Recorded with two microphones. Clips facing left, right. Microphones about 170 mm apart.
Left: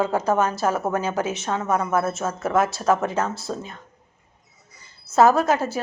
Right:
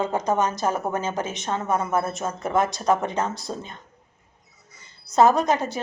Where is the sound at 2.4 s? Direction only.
5° left (ahead or behind).